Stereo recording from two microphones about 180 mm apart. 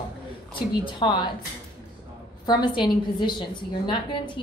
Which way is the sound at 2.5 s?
25° left (ahead or behind).